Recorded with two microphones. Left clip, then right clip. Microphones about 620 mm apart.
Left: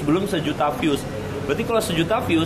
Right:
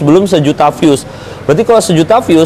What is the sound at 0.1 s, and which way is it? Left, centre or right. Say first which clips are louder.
Speech: right 14 dB; right.